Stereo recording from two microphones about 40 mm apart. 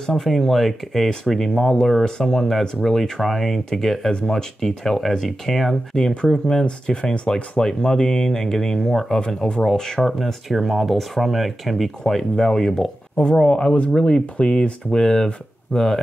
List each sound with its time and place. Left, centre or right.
0.0 s speech: centre
6.4 s speech: left; by 10.3 s centre
10.5 s speech: centre
13.1 s speech: left